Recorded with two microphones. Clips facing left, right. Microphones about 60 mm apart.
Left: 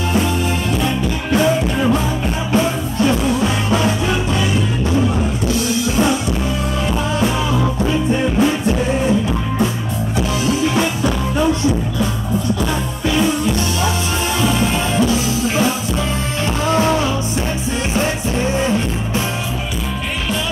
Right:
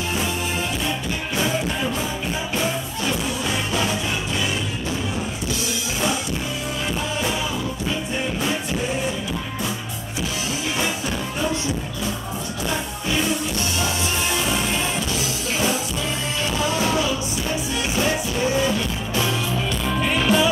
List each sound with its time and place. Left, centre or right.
16.7 s music: left